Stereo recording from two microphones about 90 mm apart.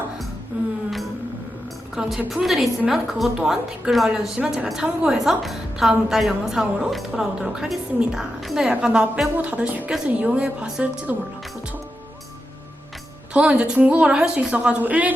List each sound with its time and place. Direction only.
2.0 s a woman's voice: 5° right (ahead or behind)
13.3 s a woman's voice: 10° right (ahead or behind)